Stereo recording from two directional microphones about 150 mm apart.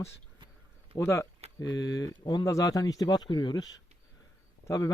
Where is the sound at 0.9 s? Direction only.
15° left (ahead or behind).